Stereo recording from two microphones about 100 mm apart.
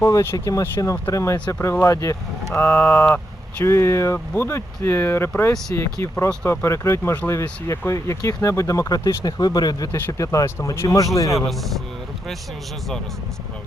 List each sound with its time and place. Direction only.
0.0 s speech: 30° left (ahead or behind)
1.5 s speech: 20° left (ahead or behind)
1.8 s speech: 30° left (ahead or behind)
2.5 s speech: 20° left (ahead or behind)
11.3 s a man's voice: centre (ahead or behind)